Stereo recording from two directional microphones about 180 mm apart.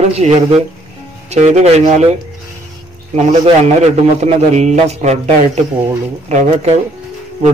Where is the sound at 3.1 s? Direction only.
35° right (ahead or behind).